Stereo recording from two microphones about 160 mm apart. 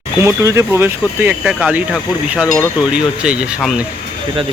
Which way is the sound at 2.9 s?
5° right (ahead or behind).